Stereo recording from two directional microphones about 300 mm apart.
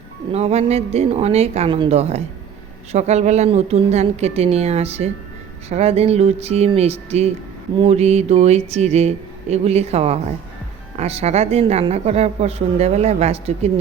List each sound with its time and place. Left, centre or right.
0.3 s speech: right